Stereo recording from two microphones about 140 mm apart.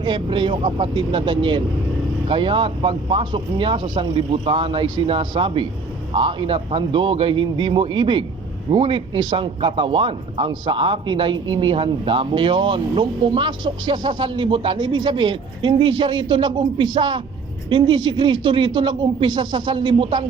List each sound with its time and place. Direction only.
0.0 s speech: 35° right (ahead or behind)